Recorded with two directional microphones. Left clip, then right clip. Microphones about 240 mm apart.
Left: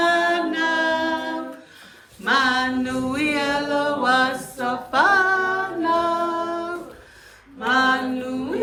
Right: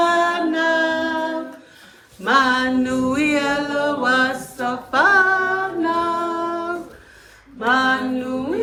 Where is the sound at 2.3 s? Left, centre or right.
Centre.